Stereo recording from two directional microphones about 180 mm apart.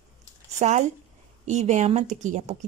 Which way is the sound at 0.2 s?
40° right (ahead or behind).